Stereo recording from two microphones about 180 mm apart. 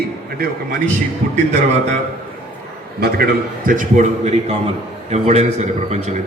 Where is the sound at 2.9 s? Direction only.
60° right (ahead or behind).